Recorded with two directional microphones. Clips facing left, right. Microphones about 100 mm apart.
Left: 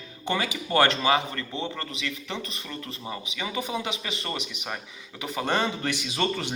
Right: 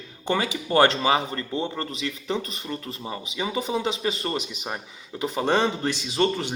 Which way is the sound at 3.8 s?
30° right (ahead or behind).